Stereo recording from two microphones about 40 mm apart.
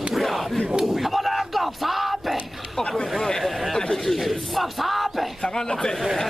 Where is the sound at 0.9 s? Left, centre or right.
Centre.